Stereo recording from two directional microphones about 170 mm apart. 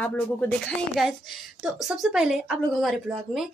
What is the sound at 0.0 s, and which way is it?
A woman's voice, 10° left (ahead or behind).